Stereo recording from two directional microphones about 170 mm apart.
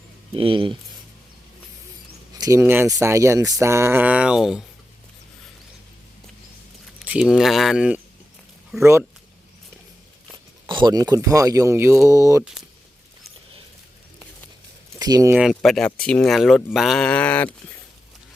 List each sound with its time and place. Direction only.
0.3 s speech: 30° right (ahead or behind)
2.4 s speech: 15° right (ahead or behind)
7.0 s speech: 5° right (ahead or behind)
8.8 s speech: 15° right (ahead or behind)
10.3 s speech: 25° right (ahead or behind)
14.9 s speech: 20° right (ahead or behind)
15.4 s speech: centre (ahead or behind)
16.7 s a sound: centre (ahead or behind)